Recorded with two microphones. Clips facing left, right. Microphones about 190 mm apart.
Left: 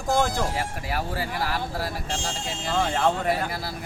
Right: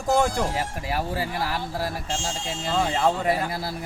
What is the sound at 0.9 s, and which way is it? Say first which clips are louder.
Speech: right 3 dB; 25° right (ahead or behind).